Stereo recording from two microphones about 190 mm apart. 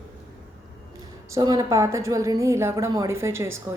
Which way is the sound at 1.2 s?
20° right (ahead or behind).